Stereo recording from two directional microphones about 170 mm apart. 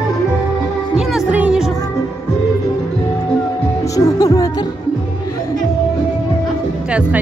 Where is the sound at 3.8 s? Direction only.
20° left (ahead or behind).